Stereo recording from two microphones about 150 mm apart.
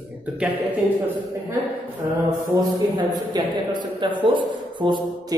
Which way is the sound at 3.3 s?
25° right (ahead or behind).